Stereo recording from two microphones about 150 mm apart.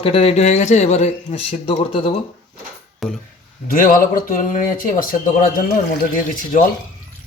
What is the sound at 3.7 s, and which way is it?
Speech, 65° left (ahead or behind).